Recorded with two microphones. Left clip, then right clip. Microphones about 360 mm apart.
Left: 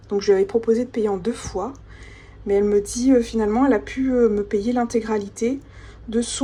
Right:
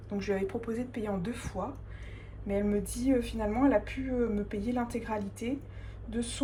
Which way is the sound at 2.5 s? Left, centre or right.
Centre.